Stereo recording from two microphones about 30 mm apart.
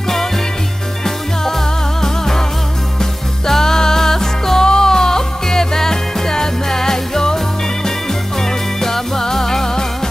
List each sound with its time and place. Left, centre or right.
2.0 s music: centre
8.4 s music: centre